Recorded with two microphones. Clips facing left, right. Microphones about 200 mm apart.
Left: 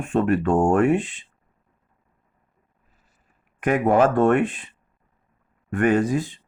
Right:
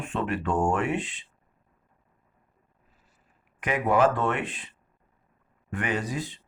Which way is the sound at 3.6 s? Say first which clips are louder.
Left 5 dB; 50° left (ahead or behind).